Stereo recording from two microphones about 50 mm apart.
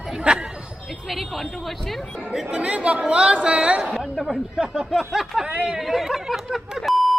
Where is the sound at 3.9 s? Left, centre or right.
Centre.